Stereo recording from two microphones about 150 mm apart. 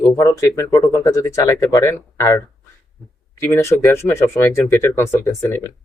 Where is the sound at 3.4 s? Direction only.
15° left (ahead or behind).